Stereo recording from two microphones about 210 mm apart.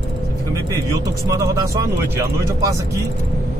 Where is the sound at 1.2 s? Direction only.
15° right (ahead or behind).